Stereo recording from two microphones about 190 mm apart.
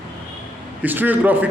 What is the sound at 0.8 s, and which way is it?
Speech, 10° right (ahead or behind).